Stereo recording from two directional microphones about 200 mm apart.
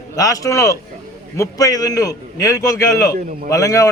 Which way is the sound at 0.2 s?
15° left (ahead or behind).